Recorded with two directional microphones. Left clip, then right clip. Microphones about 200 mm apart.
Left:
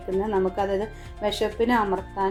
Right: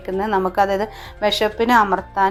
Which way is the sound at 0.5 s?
15° right (ahead or behind).